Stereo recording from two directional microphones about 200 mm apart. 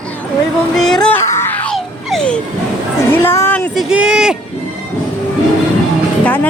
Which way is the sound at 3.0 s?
10° left (ahead or behind).